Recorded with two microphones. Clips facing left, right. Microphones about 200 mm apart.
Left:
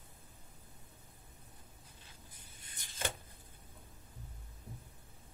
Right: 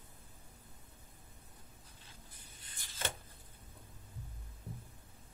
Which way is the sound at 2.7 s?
20° left (ahead or behind).